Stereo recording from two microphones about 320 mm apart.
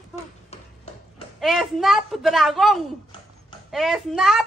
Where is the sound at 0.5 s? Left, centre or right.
Centre.